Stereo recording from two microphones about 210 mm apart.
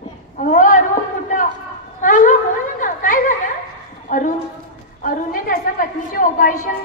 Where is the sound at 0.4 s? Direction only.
40° left (ahead or behind).